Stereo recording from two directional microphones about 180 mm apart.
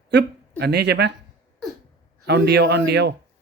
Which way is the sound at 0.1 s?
70° right (ahead or behind).